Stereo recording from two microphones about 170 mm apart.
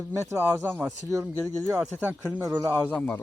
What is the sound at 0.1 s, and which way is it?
Speech, 15° right (ahead or behind).